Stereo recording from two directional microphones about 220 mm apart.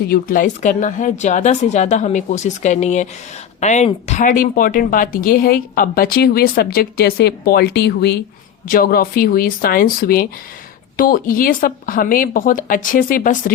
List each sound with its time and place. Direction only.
0.1 s speech: 40° left (ahead or behind)